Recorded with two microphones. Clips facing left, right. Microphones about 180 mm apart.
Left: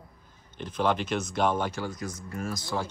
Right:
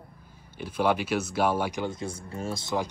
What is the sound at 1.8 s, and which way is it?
Speech, 25° right (ahead or behind).